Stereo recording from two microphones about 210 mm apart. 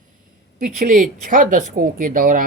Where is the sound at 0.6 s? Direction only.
40° right (ahead or behind).